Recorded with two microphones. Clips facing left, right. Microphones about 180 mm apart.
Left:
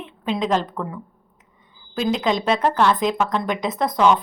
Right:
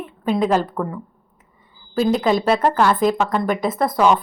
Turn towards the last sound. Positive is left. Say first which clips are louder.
# right 1 dB
turn(degrees=-5)  # may be behind; listen again after turning